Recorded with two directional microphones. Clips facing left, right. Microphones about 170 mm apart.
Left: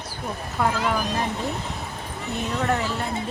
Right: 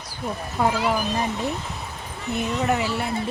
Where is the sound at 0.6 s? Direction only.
10° right (ahead or behind).